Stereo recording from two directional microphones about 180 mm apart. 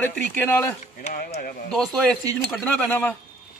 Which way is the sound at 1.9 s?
Centre (ahead or behind).